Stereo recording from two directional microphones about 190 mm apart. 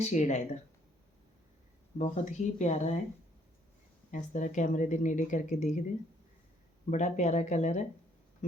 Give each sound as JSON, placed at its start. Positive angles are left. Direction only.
{"t": 0.0, "sound": "speech", "side_deg": 35}
{"t": 2.0, "sound": "speech", "side_deg": 35}
{"t": 4.1, "sound": "speech", "side_deg": 40}
{"t": 6.9, "sound": "speech", "side_deg": 40}